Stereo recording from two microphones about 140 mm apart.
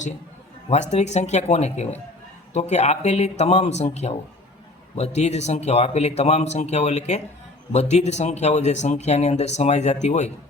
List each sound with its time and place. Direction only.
0.7 s speech: 55° left (ahead or behind)